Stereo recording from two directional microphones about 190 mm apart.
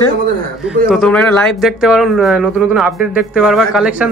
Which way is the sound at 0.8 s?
Centre (ahead or behind).